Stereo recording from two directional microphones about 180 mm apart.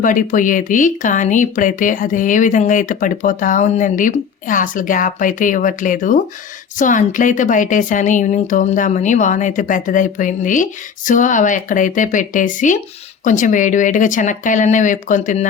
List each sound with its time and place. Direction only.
0.0 s speech: 45° left (ahead or behind)